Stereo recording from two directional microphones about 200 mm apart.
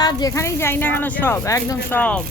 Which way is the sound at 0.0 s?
20° left (ahead or behind).